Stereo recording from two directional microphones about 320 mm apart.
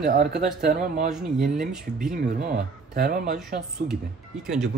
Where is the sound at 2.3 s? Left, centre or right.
Right.